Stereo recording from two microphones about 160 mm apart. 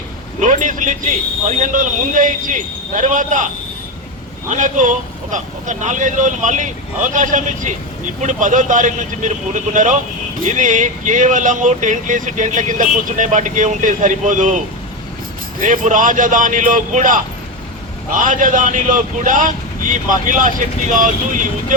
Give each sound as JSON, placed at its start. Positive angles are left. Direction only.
{"t": 0.3, "sound": "speech", "side_deg": -55}